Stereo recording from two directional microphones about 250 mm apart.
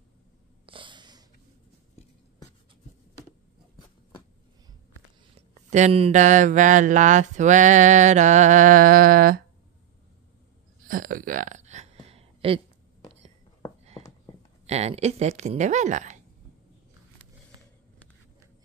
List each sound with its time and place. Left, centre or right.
0.7 s snort: centre
5.5 s speech: right
10.9 s a sound: right
14.7 s speech: right